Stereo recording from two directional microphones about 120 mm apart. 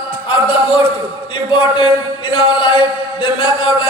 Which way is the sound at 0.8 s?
45° left (ahead or behind).